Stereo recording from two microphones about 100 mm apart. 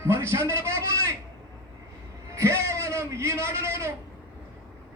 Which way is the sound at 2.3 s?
30° right (ahead or behind).